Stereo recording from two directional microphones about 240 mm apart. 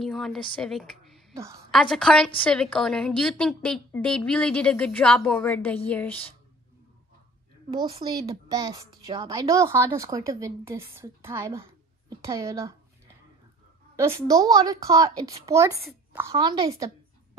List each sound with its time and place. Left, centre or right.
0.0 s speech: centre
1.3 s a woman's voice: centre
1.7 s a woman's voice: centre
7.7 s a woman's voice: centre
13.9 s a woman's voice: centre